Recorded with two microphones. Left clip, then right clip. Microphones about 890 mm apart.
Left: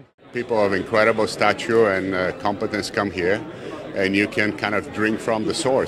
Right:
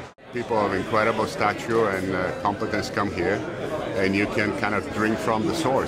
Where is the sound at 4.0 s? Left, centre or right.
Right.